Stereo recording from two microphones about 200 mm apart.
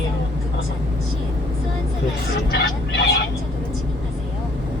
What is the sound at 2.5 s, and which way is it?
Vehicle, 55° left (ahead or behind).